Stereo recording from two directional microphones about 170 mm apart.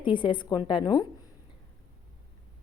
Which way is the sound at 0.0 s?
30° left (ahead or behind).